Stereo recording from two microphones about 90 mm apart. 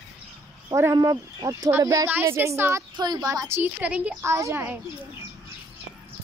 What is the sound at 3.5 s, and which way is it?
Speech, 20° right (ahead or behind).